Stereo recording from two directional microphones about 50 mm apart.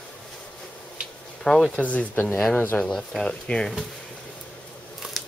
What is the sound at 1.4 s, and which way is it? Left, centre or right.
Speech, centre.